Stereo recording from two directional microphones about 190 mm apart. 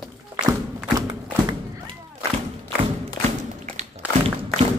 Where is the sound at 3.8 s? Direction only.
35° right (ahead or behind).